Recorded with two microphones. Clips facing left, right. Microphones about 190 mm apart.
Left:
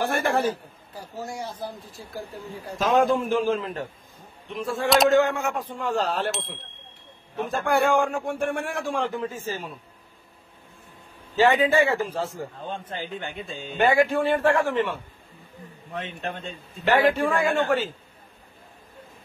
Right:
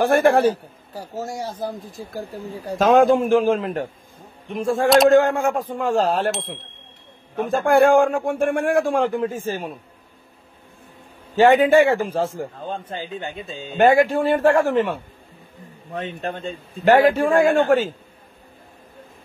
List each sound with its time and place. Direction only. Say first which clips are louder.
0.0 s a man's voice: right 8 dB; 55° right (ahead or behind)
0.9 s a man's voice: right 5 dB; 40° right (ahead or behind)
2.8 s a man's voice: right 6 dB; 80° right
3.2 s a man's voice: right 6 dB; 55° right (ahead or behind)
4.8 s speech: right 5 dB; centre (ahead or behind)
5.1 s a man's voice: right 5 dB; 50° right (ahead or behind)
6.3 s speech: right 4 dB; centre (ahead or behind)
7.3 s a man's voice: right 7 dB; 50° right (ahead or behind)
11.3 s a man's voice: right 6 dB; 50° right (ahead or behind)
12.6 s a man's voice: right 3 dB; 40° right (ahead or behind)
13.2 s a man's voice: right 3 dB; 20° right (ahead or behind)
13.7 s a man's voice: right 5 dB; 45° right (ahead or behind)